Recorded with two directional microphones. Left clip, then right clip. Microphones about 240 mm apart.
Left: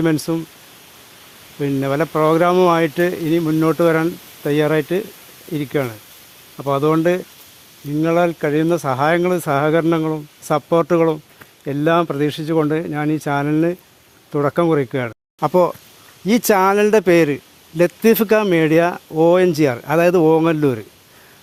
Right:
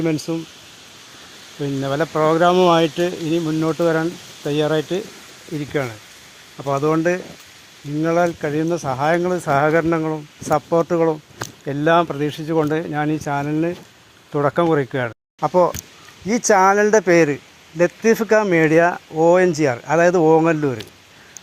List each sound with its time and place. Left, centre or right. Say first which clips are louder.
0.0 s speech: left 3 dB; left
1.6 s speech: left 2 dB; left
16.2 s speech: even; left